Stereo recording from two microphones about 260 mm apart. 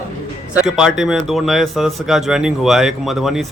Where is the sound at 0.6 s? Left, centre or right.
Centre.